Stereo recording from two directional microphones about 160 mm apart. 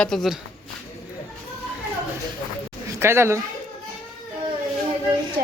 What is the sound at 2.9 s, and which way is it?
Speech, 15° right (ahead or behind).